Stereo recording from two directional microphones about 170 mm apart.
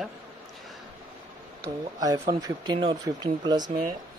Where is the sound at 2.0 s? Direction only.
20° right (ahead or behind).